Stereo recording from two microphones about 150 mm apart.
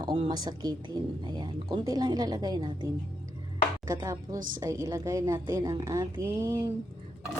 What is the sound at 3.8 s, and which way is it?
Speech, 20° right (ahead or behind).